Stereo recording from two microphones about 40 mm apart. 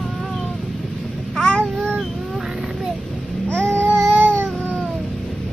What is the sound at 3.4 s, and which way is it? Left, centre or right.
Babbling, left.